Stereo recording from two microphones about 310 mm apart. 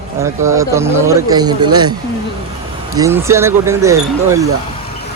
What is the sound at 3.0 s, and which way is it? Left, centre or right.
Speech, centre.